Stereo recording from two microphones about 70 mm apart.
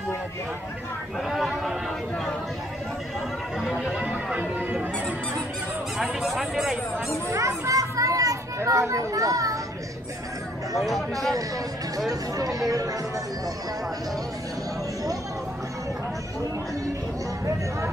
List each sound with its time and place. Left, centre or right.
1.3 s a sound: centre
3.8 s music: centre
5.9 s speech: centre
7.2 s children playing: right
10.8 s speech: centre
12.1 s speech: right